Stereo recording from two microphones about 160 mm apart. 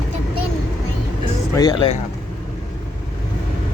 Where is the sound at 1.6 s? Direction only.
30° left (ahead or behind).